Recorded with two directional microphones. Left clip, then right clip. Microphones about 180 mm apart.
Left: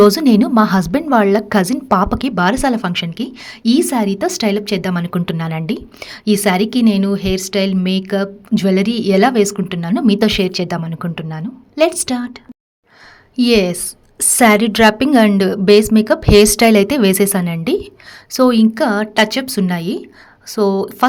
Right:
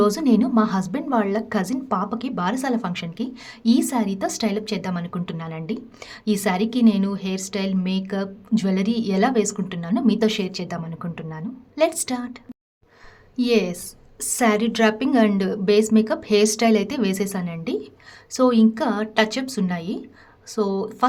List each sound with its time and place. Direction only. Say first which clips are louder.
0.0 s a woman's voice: left 9 dB; 35° left (ahead or behind)
13.3 s a woman's voice: left 7 dB; 35° left (ahead or behind)